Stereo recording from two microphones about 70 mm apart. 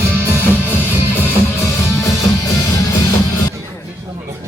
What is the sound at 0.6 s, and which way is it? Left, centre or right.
Music, left.